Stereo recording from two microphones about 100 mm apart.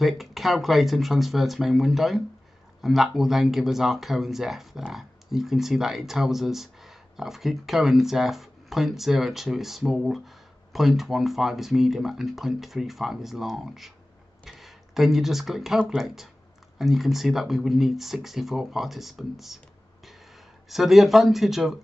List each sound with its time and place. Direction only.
0.0 s speech: centre (ahead or behind)
14.4 s a sound: centre (ahead or behind)
16.7 s speech: centre (ahead or behind)
20.6 s speech: centre (ahead or behind)